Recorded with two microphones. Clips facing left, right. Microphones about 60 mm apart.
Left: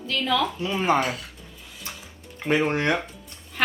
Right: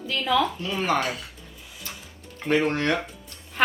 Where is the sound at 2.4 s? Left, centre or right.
Centre.